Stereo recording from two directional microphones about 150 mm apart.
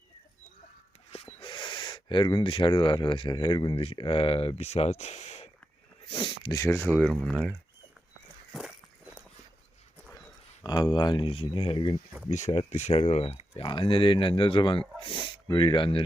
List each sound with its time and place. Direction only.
1.1 s speech: 40° left (ahead or behind)
6.1 s speech: 35° left (ahead or behind); by 7.5 s 5° left (ahead or behind)
8.5 s walk: 5° right (ahead or behind)
10.6 s speech: 25° left (ahead or behind)
12.3 s speech: 55° left (ahead or behind); by 16.0 s 35° left (ahead or behind)